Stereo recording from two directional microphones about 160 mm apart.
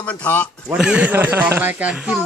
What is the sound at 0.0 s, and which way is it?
Speech, 10° left (ahead or behind).